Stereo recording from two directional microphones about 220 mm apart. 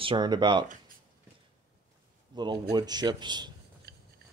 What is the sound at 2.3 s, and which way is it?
A man's voice, 20° right (ahead or behind).